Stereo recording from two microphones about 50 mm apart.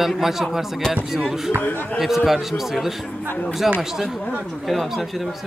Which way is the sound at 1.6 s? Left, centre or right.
Left.